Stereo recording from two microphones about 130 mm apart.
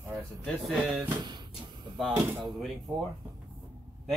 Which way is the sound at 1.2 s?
35° right (ahead or behind).